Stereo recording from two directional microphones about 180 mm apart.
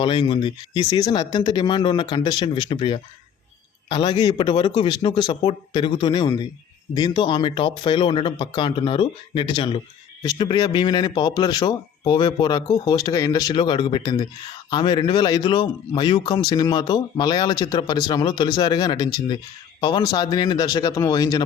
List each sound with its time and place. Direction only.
0.0 s a man's voice: 30° left (ahead or behind)